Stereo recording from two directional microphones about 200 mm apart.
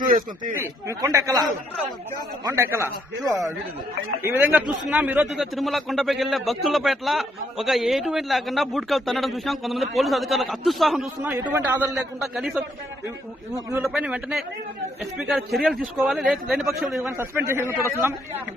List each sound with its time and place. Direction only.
0.0 s speech: 45° right (ahead or behind)
0.8 s a man's voice: 15° right (ahead or behind)
13.7 s a man's voice: 15° right (ahead or behind)
17.2 s a man's voice: 10° right (ahead or behind)